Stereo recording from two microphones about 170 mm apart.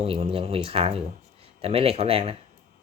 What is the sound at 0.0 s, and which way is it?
Speech, 35° right (ahead or behind).